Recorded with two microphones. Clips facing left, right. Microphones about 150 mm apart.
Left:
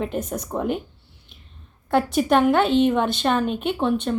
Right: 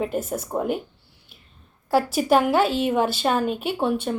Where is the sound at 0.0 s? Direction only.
5° right (ahead or behind).